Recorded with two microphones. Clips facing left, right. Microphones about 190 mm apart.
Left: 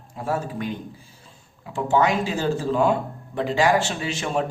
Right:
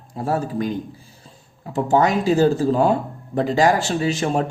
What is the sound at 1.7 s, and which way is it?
Speech, 40° right (ahead or behind).